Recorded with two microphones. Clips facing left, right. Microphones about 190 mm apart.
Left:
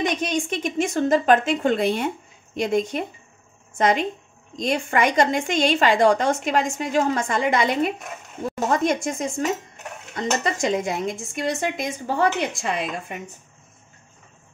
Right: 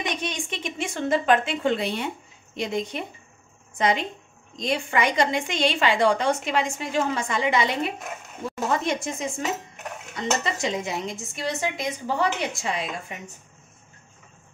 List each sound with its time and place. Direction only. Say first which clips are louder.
0.2 s a woman's voice: left 7 dB; 45° left (ahead or behind)